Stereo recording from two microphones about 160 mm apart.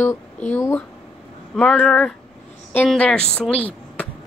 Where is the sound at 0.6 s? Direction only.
15° left (ahead or behind).